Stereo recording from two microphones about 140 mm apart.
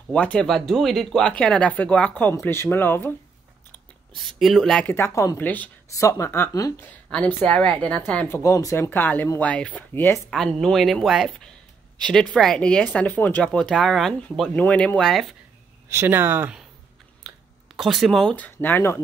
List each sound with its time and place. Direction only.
0.1 s speech: 10° left (ahead or behind)
4.3 s speech: centre (ahead or behind)
4.9 s speech: 20° left (ahead or behind)
5.4 s speech: 10° left (ahead or behind)
5.9 s speech: 20° left (ahead or behind)
6.8 s speech: 10° left (ahead or behind)
10.3 s speech: centre (ahead or behind)
15.9 s speech: 15° right (ahead or behind)
17.3 s a sound: centre (ahead or behind)
17.7 s speech: centre (ahead or behind); by 18.9 s 15° left (ahead or behind)